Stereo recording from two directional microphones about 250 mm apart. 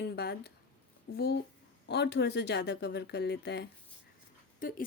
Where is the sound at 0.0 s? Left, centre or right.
Left.